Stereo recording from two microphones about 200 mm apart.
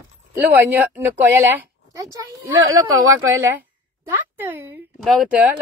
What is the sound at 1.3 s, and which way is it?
Speech, 15° right (ahead or behind).